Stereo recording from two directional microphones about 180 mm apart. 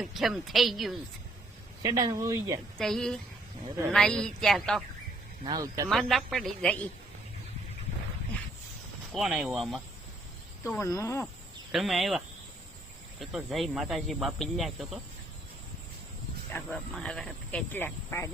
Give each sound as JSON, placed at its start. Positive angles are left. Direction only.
{"t": 0.0, "sound": "speech", "side_deg": 0}
{"t": 1.8, "sound": "speech", "side_deg": -20}
{"t": 2.7, "sound": "speech", "side_deg": 5}
{"t": 5.5, "sound": "speech", "side_deg": -20}
{"t": 5.9, "sound": "speech", "side_deg": 0}
{"t": 9.1, "sound": "speech", "side_deg": 0}
{"t": 10.6, "sound": "speech", "side_deg": 15}
{"t": 11.7, "sound": "speech", "side_deg": 0}
{"t": 16.5, "sound": "speech", "side_deg": 10}